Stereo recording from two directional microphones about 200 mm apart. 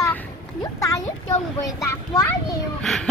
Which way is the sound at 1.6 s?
15° left (ahead or behind).